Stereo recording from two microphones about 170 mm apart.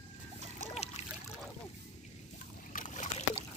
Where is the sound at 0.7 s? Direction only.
40° left (ahead or behind).